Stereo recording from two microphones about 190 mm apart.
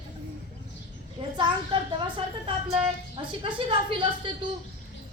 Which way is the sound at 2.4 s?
30° right (ahead or behind).